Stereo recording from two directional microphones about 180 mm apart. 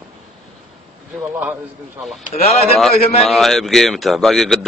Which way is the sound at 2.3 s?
35° left (ahead or behind).